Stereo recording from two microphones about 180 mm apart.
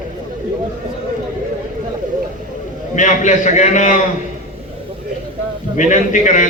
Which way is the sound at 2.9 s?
45° left (ahead or behind).